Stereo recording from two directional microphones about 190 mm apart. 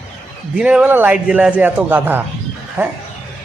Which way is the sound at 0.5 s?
5° right (ahead or behind).